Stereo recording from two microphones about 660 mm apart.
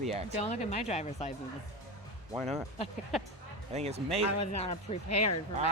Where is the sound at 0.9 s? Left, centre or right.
Centre.